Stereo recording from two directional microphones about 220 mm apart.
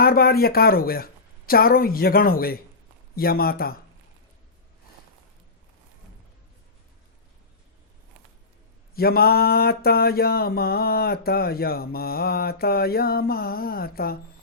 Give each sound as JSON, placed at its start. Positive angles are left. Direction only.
{"t": 0.0, "sound": "speech", "side_deg": 45}
{"t": 3.2, "sound": "mantra", "side_deg": 45}
{"t": 9.0, "sound": "mantra", "side_deg": 45}